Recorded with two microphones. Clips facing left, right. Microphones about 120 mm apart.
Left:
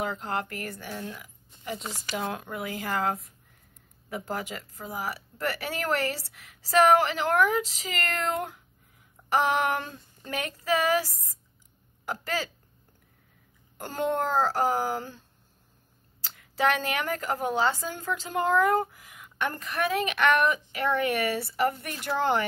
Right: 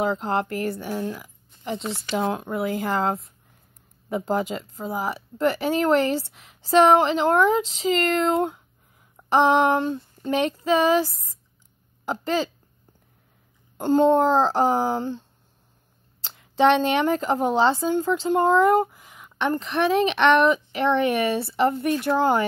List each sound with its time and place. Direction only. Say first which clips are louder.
0.0 s speech: right 7 dB; 35° right (ahead or behind)
0.9 s a sound: right 9 dB; 30° right (ahead or behind)
2.1 s a woman's voice: right 8 dB; 25° right (ahead or behind)
4.4 s a woman's voice: right 9 dB; 30° right (ahead or behind)
12.1 s a woman's voice: right 7 dB; 25° right (ahead or behind)
13.7 s a woman's voice: right 11 dB; 20° right (ahead or behind)
16.5 s a woman's voice: right 8 dB; 25° right (ahead or behind)